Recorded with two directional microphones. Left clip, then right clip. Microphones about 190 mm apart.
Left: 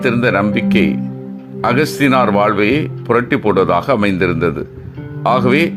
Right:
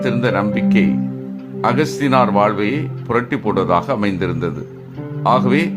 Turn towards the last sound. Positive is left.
turn(degrees=20)  # may be behind; listen again after turning